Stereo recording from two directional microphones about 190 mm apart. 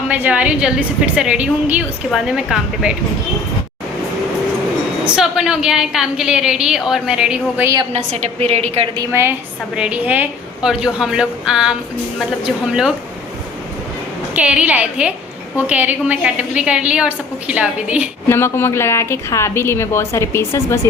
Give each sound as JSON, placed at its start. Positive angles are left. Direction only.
{"t": 0.1, "sound": "a woman's voice", "side_deg": -5}
{"t": 5.0, "sound": "a woman's voice", "side_deg": -5}
{"t": 7.9, "sound": "a woman's voice", "side_deg": -35}
{"t": 9.0, "sound": "a woman's voice", "side_deg": -15}
{"t": 14.3, "sound": "a woman's voice", "side_deg": -5}
{"t": 18.3, "sound": "a woman's voice", "side_deg": 10}